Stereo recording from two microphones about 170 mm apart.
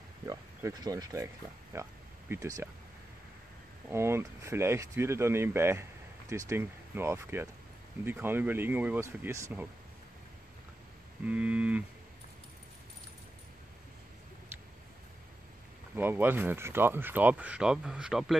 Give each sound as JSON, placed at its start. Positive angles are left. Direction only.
{"t": 0.2, "sound": "speech", "side_deg": -15}
{"t": 3.9, "sound": "speech", "side_deg": -15}
{"t": 11.2, "sound": "speech", "side_deg": -10}
{"t": 16.0, "sound": "speech", "side_deg": -10}